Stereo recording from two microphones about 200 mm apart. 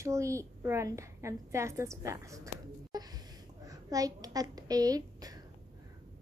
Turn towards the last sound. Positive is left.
turn(degrees=-20)  # may be behind; listen again after turning